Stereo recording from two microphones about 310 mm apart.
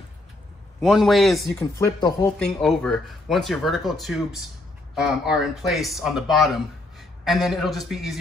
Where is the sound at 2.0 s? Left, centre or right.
Centre.